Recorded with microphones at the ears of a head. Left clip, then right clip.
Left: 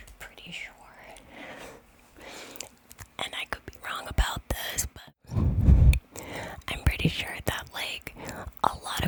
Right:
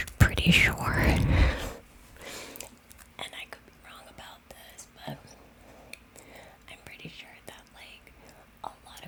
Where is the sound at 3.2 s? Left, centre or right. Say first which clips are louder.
Left 7 dB; left.